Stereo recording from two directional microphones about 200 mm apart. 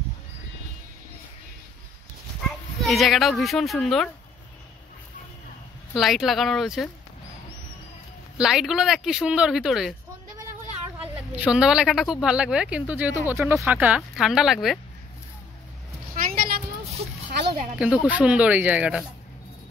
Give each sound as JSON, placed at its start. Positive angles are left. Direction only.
{"t": 2.8, "sound": "speech", "side_deg": 0}
{"t": 5.9, "sound": "speech", "side_deg": 0}
{"t": 8.4, "sound": "speech", "side_deg": 0}
{"t": 11.0, "sound": "speech", "side_deg": -5}
{"t": 16.2, "sound": "a sound", "side_deg": -45}
{"t": 17.7, "sound": "speech", "side_deg": -5}